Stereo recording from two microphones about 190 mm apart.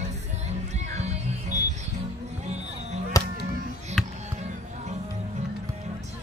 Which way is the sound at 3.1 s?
20° left (ahead or behind).